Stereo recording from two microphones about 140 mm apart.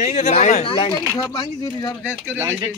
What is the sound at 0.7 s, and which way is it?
Speech, 40° left (ahead or behind).